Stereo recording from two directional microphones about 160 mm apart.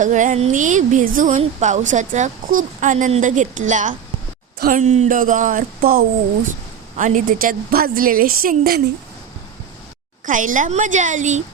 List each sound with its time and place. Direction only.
0.0 s speech: 50° right (ahead or behind)
1.4 s a woman's voice: 45° right (ahead or behind); by 6.1 s 65° right (ahead or behind)
6.9 s a woman's voice: 55° right (ahead or behind)
10.2 s speech: 55° right (ahead or behind)